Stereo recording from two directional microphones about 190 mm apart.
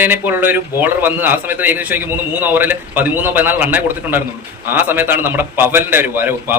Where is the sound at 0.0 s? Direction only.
10° right (ahead or behind).